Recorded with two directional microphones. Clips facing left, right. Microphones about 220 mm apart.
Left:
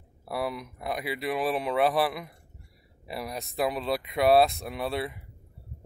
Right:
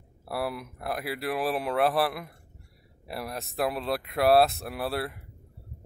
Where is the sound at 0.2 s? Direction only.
5° right (ahead or behind).